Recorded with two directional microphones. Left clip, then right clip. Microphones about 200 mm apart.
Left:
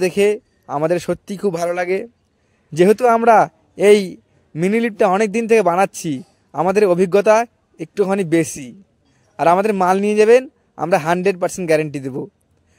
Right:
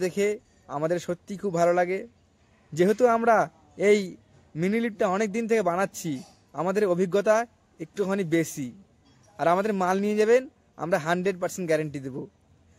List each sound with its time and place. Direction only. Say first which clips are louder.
0.0 s a man's voice: left 10 dB; 40° left (ahead or behind)